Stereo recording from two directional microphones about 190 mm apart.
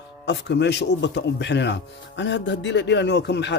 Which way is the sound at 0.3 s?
65° left (ahead or behind).